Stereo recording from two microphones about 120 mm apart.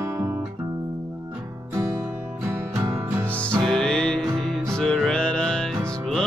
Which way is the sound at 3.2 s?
10° left (ahead or behind).